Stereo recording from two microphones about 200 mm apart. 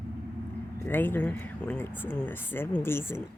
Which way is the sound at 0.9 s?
10° left (ahead or behind).